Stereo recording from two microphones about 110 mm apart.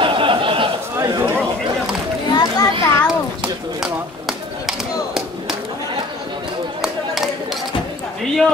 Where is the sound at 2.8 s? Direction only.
25° left (ahead or behind).